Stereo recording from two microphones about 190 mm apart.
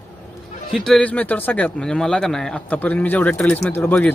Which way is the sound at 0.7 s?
Centre (ahead or behind).